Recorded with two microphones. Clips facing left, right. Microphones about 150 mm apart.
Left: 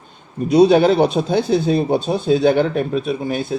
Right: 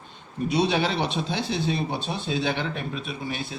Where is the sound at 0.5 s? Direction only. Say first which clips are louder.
Left 13 dB; 50° left (ahead or behind).